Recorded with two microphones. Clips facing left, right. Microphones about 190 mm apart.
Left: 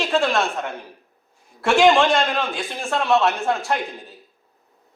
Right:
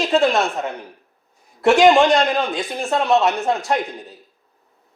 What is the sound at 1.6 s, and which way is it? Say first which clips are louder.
A man's voice: right 3 dB; 20° right (ahead or behind).